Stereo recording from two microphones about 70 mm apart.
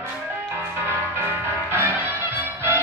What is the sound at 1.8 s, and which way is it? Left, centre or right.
Music, right.